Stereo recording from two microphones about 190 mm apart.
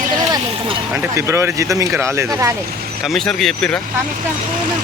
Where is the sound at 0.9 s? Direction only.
10° right (ahead or behind).